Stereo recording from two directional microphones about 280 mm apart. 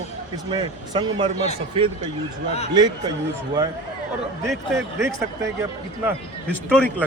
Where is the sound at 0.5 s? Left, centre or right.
Centre.